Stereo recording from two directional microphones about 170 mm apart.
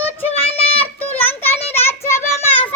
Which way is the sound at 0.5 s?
35° left (ahead or behind).